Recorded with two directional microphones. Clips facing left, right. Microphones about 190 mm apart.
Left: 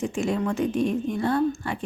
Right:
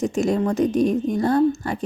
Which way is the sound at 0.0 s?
40° right (ahead or behind).